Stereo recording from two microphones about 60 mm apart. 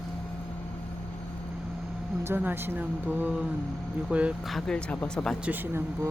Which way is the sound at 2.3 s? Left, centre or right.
Right.